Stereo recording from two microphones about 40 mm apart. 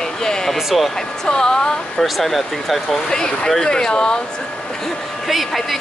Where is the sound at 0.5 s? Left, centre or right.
Centre.